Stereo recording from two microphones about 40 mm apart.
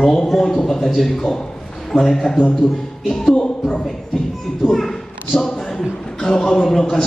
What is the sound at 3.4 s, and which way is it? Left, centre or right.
Speech, left.